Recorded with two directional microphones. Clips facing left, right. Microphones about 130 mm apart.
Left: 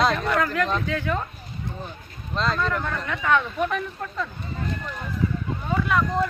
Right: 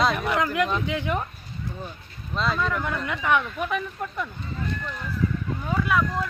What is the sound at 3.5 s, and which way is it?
Speech, 5° right (ahead or behind).